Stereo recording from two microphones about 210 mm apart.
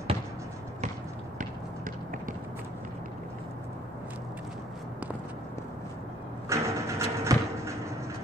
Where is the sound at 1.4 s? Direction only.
40° right (ahead or behind).